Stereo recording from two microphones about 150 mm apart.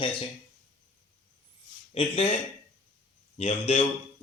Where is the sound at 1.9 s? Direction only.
40° left (ahead or behind).